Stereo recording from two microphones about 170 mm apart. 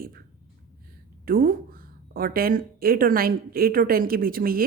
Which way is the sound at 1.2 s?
60° right (ahead or behind).